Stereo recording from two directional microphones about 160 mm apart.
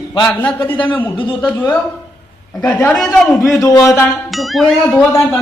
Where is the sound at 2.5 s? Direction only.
5° left (ahead or behind).